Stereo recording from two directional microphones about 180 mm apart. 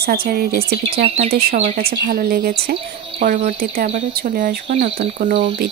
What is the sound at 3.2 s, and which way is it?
Speech, 40° right (ahead or behind).